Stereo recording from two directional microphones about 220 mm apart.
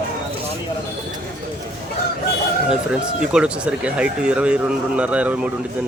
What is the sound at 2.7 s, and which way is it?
Speech, 5° right (ahead or behind).